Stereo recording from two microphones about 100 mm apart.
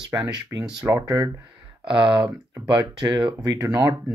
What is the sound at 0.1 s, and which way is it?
Speech, 35° right (ahead or behind).